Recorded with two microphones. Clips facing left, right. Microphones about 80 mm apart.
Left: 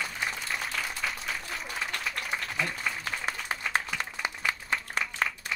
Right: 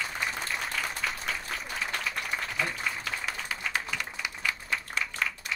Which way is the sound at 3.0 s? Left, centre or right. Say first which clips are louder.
Left 1 dB; left.